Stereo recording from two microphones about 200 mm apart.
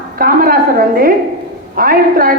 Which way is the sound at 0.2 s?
45° right (ahead or behind).